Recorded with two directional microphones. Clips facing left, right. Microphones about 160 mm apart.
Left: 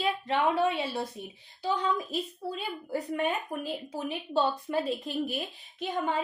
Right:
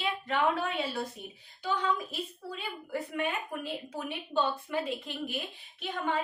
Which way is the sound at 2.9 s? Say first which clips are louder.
Left 3 dB; 35° left (ahead or behind).